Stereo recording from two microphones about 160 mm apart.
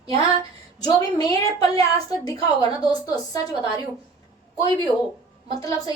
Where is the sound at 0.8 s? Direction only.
25° left (ahead or behind).